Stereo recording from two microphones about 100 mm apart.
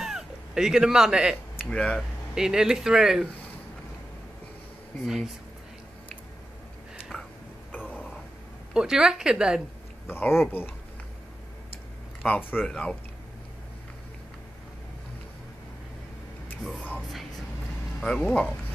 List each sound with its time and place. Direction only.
0.0 s cat: 5° right (ahead or behind)
1.7 s speech: 10° left (ahead or behind)
2.3 s speech: 5° right (ahead or behind)
5.0 s speech: 5° right (ahead or behind)
7.9 s a sound: 10° left (ahead or behind)
8.7 s speech: 5° right (ahead or behind)
10.0 s speech: 25° left (ahead or behind)
12.2 s speech: 15° left (ahead or behind)
18.0 s speech: 10° left (ahead or behind)